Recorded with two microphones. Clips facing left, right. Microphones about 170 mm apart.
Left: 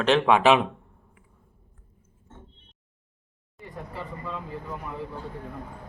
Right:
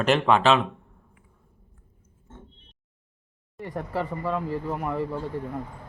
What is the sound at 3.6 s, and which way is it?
Speech, 80° right.